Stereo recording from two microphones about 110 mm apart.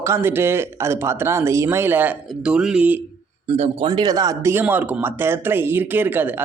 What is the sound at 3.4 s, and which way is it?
Speech, 75° right (ahead or behind).